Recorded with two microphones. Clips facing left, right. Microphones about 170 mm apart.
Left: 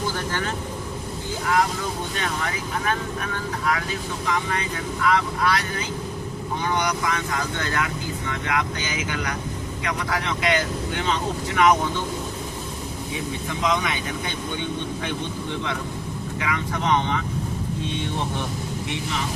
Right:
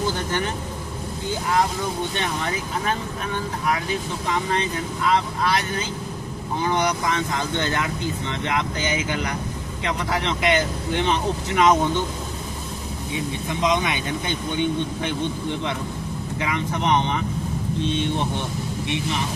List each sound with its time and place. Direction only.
0.1 s vehicle: 20° right (ahead or behind)
2.1 s speech: 25° right (ahead or behind)
13.5 s speech: 20° right (ahead or behind)
16.4 s speech: 25° right (ahead or behind)